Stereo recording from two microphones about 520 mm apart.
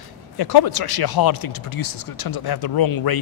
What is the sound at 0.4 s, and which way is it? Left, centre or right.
Speech, left.